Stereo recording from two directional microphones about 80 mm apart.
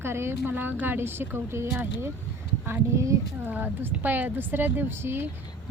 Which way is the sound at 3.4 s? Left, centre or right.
Right.